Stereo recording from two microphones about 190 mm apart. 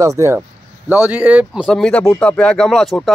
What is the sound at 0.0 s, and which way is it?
Speech, 15° right (ahead or behind).